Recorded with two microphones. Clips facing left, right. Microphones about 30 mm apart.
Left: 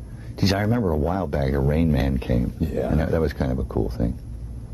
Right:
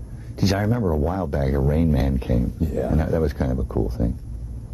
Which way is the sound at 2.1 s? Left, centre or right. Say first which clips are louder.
Even; left.